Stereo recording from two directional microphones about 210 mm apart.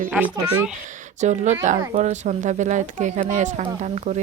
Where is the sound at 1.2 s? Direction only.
35° right (ahead or behind).